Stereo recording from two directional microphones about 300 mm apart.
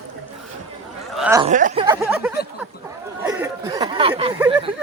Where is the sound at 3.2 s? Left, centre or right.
Centre.